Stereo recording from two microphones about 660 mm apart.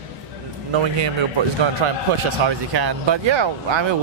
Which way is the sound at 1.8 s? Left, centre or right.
Right.